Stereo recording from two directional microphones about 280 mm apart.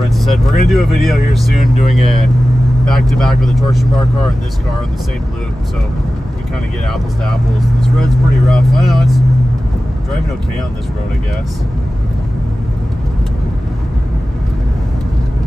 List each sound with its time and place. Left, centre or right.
0.2 s speech: centre
2.9 s speech: centre
7.8 s speech: centre